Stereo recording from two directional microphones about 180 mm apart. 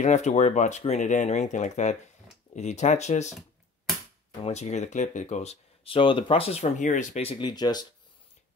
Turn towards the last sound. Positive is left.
turn(degrees=20)  # may be behind; listen again after turning